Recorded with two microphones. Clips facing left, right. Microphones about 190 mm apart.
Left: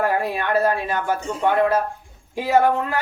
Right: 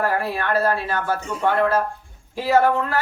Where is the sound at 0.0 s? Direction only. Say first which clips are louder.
Left 1 dB; 20° left (ahead or behind).